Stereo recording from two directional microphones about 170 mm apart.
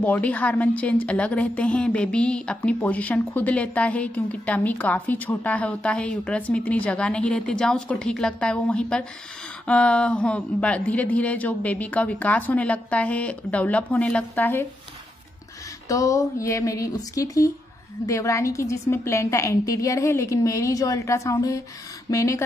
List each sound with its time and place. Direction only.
0.0 s a woman's voice: 10° left (ahead or behind)
15.9 s a woman's voice: 20° left (ahead or behind)